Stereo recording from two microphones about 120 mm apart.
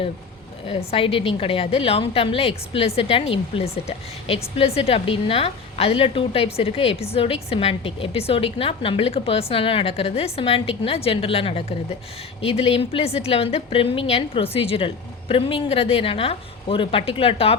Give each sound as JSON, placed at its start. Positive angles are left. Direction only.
{"t": 0.7, "sound": "a woman's voice", "side_deg": 55}